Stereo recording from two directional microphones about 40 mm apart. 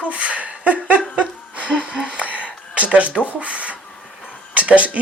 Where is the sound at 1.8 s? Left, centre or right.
Right.